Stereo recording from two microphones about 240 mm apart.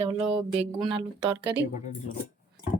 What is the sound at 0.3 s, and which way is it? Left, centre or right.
Speech, centre.